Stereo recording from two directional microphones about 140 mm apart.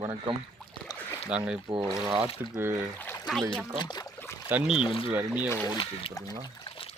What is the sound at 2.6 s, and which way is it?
Speech, 15° right (ahead or behind).